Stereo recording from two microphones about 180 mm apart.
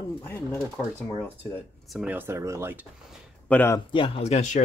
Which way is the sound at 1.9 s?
10° right (ahead or behind).